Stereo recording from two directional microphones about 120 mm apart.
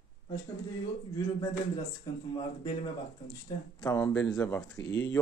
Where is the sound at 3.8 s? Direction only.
30° left (ahead or behind).